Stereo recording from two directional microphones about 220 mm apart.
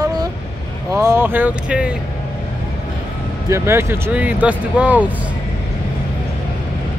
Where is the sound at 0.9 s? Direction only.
10° right (ahead or behind).